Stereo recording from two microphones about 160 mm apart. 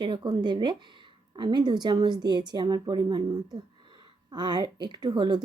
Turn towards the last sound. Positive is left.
turn(degrees=-25)  # may be behind; listen again after turning